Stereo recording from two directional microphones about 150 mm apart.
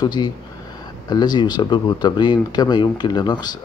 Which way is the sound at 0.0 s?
30° left (ahead or behind).